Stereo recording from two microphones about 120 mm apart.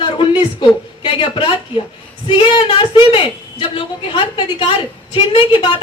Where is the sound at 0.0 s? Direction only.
45° left (ahead or behind).